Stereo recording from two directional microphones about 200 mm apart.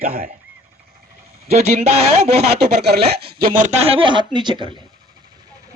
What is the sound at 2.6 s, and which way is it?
Speech, 55° right (ahead or behind).